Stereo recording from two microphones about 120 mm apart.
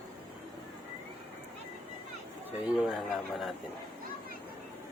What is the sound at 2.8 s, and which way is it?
Speech, 5° right (ahead or behind).